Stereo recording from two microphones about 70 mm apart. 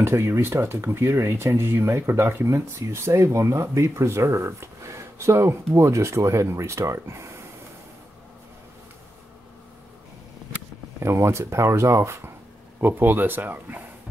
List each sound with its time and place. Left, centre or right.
0.0 s speech: right
11.0 s speech: right
12.8 s speech: right